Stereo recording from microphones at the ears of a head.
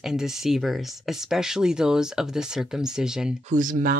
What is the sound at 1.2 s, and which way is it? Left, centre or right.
Speech, centre.